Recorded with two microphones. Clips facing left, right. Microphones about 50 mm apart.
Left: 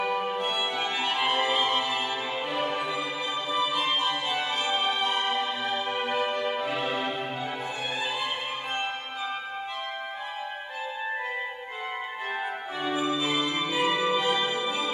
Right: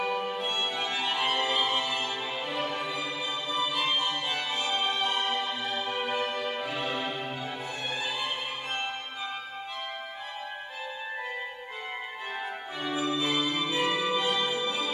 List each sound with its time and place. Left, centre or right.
0.0 s music: centre
12.8 s music: centre